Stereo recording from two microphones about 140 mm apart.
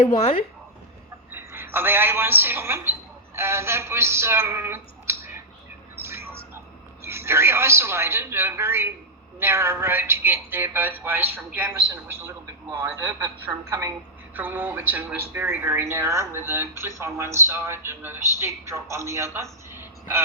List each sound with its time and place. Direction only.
0.0 s speech: 55° left (ahead or behind)
1.3 s a woman's voice: 15° right (ahead or behind)
6.0 s a sound: 15° right (ahead or behind)
7.0 s a woman's voice: 20° right (ahead or behind)